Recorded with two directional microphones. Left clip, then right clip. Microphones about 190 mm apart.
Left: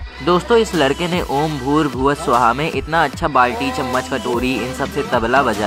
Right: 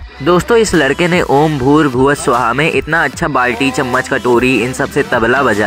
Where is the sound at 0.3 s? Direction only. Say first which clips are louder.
Right 4 dB; 35° right (ahead or behind).